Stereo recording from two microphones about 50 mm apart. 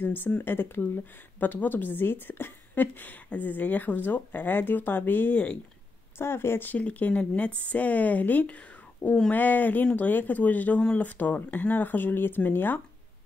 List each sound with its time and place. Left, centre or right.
0.0 s speech: left
6.1 s speech: left
6.8 s speech: left